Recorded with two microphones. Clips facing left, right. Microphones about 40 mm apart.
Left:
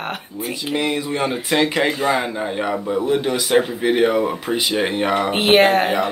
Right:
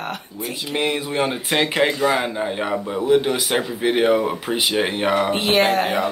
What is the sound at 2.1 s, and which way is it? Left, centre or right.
Speech, centre.